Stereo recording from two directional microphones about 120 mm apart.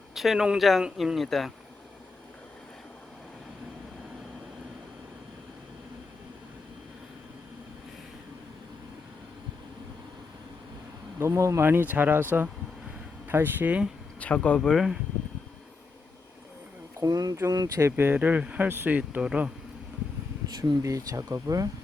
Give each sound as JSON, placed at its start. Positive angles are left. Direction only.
{"t": 0.1, "sound": "speech", "side_deg": 0}
{"t": 11.2, "sound": "speech", "side_deg": -25}
{"t": 13.2, "sound": "speech", "side_deg": -15}
{"t": 14.2, "sound": "speech", "side_deg": 10}
{"t": 17.0, "sound": "speech", "side_deg": -30}
{"t": 20.6, "sound": "speech", "side_deg": -30}